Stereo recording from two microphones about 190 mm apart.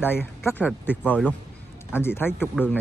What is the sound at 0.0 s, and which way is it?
Speech, 10° left (ahead or behind).